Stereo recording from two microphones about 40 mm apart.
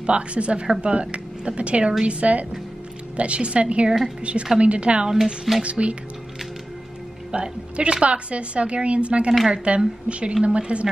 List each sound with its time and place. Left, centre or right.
0.0 s a woman's voice: right
5.1 s speech: centre
5.6 s a woman's voice: right
7.2 s a woman's voice: right